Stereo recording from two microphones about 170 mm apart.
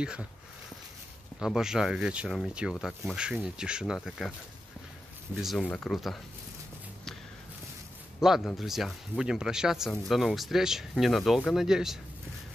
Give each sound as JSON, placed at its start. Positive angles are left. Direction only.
{"t": 0.0, "sound": "speech", "side_deg": -5}
{"t": 1.4, "sound": "speech", "side_deg": -5}
{"t": 5.3, "sound": "speech", "side_deg": 0}
{"t": 8.2, "sound": "speech", "side_deg": 0}